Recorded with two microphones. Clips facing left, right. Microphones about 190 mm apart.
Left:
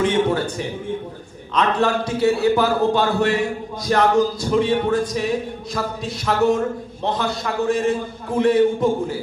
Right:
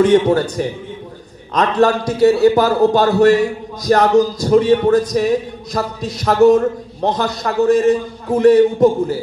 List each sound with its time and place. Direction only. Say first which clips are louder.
0.0 s a man's voice: right 7 dB; 40° right (ahead or behind)